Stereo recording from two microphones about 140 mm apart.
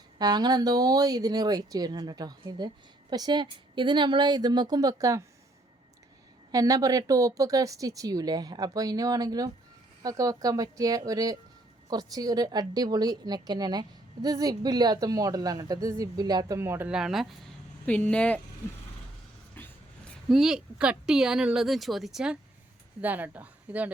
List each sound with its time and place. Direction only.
0.2 s a woman's voice: 30° right (ahead or behind)
6.5 s a woman's voice: 25° right (ahead or behind)
16.9 s speech: 5° right (ahead or behind)
17.8 s speech: 10° left (ahead or behind)
19.5 s vehicle: 15° left (ahead or behind)
20.3 s speech: 5° right (ahead or behind)